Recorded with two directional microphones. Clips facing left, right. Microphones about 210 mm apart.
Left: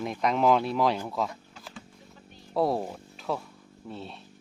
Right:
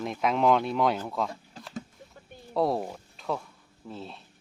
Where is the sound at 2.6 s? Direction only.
Centre (ahead or behind).